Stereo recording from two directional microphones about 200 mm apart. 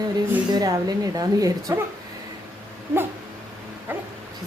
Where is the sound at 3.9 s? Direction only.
10° right (ahead or behind).